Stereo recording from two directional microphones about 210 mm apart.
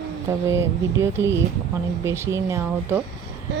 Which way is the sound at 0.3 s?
15° right (ahead or behind).